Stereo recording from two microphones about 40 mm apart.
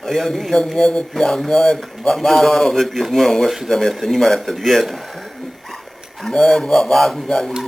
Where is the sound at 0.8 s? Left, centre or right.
Left.